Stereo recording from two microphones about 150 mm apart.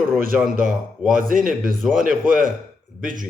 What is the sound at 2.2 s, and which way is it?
Speech, 65° right (ahead or behind).